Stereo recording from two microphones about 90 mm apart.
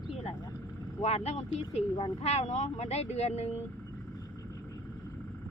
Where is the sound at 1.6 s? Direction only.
60° left (ahead or behind).